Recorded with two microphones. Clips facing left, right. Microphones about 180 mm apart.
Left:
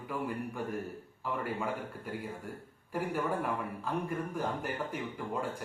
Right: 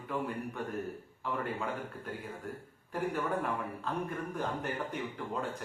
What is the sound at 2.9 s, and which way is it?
Speech, 10° left (ahead or behind).